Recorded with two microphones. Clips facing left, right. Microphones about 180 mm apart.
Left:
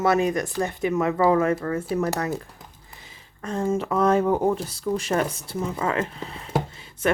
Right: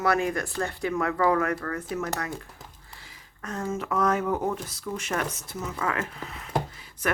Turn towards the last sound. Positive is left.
turn(degrees=25)  # may be behind; listen again after turning